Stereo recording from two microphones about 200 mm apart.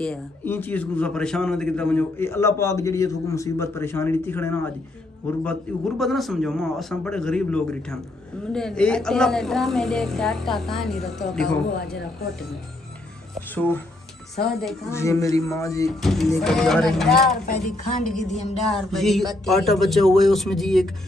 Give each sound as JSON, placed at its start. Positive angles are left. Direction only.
{"t": 0.0, "sound": "a man's voice", "side_deg": 5}
{"t": 14.4, "sound": "a woman's voice", "side_deg": 0}
{"t": 14.9, "sound": "a man's voice", "side_deg": 15}
{"t": 16.0, "sound": "a woman's voice", "side_deg": 0}